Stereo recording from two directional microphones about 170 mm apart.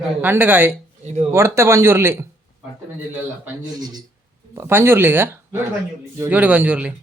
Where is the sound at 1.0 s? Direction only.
40° right (ahead or behind).